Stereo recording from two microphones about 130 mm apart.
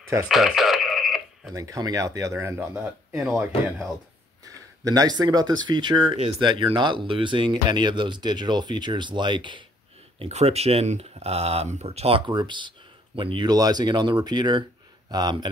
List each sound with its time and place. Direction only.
0.3 s radio: centre (ahead or behind)
1.5 s speech: 25° right (ahead or behind)
4.8 s speech: 30° right (ahead or behind)
10.1 s speech: 55° right (ahead or behind)
12.3 s speech: 35° right (ahead or behind)